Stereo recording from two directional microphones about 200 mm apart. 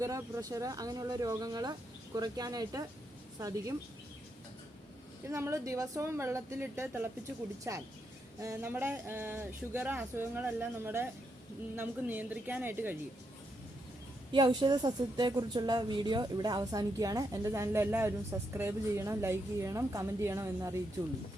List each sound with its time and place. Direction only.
0.0 s a woman's voice: 15° right (ahead or behind)
5.3 s a woman's voice: 15° right (ahead or behind)
14.3 s a woman's voice: 20° right (ahead or behind)